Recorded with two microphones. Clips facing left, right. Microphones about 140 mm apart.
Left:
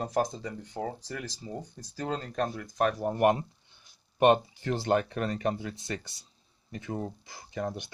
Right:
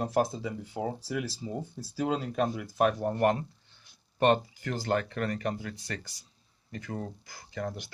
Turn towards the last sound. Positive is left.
turn(degrees=20)  # may be behind; listen again after turning